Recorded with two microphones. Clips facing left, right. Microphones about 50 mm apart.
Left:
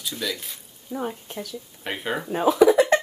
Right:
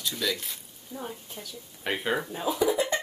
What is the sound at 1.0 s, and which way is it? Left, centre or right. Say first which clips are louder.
Speech: left 8 dB; left.